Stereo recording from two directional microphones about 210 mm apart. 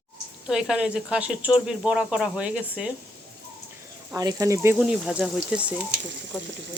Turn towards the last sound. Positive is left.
turn(degrees=-5)  # may be behind; listen again after turning